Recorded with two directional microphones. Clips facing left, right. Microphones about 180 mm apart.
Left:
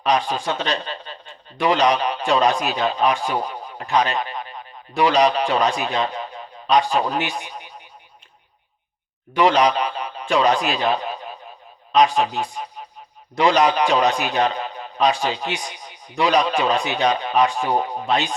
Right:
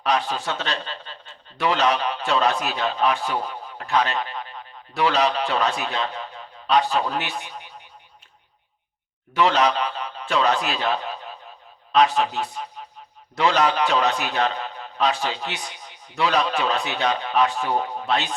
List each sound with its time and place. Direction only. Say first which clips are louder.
0.0 s a man's voice: left 3 dB; 15° left (ahead or behind)
9.3 s a man's voice: left 3 dB; 15° left (ahead or behind)